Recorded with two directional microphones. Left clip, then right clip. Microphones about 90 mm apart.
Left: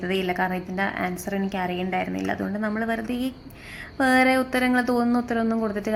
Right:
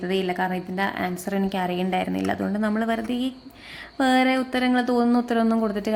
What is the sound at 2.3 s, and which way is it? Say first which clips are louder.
Speech: right 2 dB; 25° right (ahead or behind).